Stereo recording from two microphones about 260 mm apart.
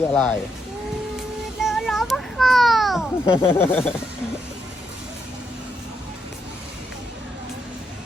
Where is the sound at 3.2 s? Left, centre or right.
Left.